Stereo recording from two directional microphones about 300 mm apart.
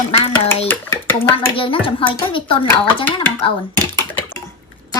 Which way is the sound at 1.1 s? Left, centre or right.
Centre.